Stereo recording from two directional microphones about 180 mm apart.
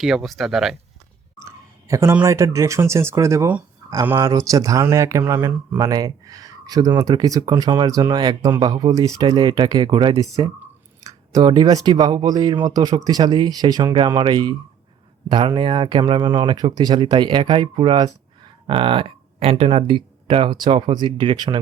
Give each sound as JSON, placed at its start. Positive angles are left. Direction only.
{"t": 0.0, "sound": "speech", "side_deg": 0}
{"t": 1.4, "sound": "speech", "side_deg": -15}